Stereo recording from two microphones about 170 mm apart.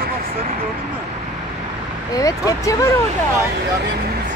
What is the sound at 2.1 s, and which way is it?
Speech, 20° left (ahead or behind).